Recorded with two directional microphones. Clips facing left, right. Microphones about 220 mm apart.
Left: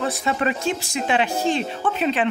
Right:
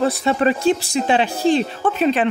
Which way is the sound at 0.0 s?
35° right (ahead or behind).